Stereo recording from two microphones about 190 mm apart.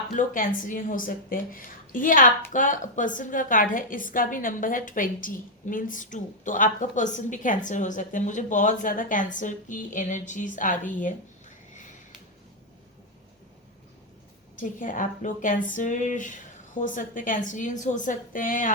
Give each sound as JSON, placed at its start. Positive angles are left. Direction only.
{"t": 0.2, "sound": "a woman's voice", "side_deg": 45}
{"t": 11.7, "sound": "a sound", "side_deg": 40}
{"t": 14.6, "sound": "a woman's voice", "side_deg": 45}